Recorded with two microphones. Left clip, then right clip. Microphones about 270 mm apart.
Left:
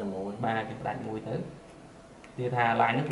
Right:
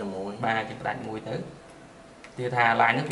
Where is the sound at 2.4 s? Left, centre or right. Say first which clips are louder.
Right 4 dB; centre.